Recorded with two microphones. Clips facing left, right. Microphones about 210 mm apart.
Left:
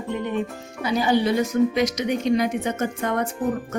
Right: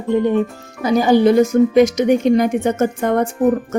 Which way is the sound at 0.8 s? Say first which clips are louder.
Right 8 dB; 45° right (ahead or behind).